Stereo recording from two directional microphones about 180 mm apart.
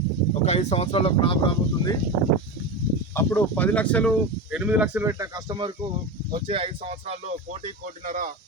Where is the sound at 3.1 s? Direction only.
10° left (ahead or behind).